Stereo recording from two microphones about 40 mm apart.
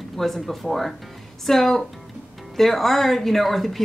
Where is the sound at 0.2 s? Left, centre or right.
Centre.